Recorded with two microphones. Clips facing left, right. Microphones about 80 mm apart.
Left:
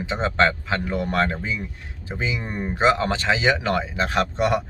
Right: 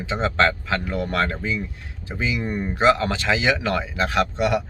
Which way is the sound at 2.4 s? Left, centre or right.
Centre.